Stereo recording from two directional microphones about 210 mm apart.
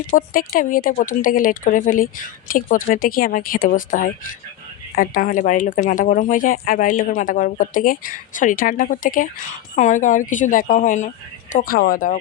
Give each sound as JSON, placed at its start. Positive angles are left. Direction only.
{"t": 0.1, "sound": "speech", "side_deg": 40}